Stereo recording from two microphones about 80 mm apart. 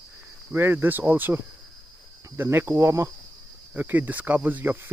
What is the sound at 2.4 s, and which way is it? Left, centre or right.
Cricket, right.